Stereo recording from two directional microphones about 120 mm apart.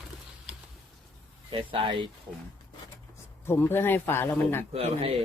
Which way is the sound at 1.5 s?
45° right (ahead or behind).